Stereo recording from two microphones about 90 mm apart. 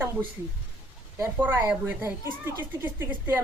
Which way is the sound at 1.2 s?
20° right (ahead or behind).